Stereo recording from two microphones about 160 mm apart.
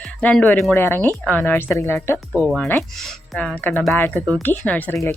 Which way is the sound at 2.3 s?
10° right (ahead or behind).